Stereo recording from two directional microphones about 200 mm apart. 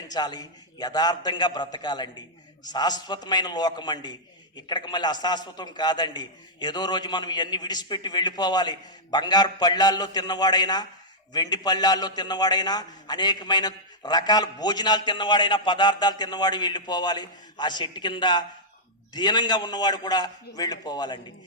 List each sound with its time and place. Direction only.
0.1 s a man's voice: 20° left (ahead or behind)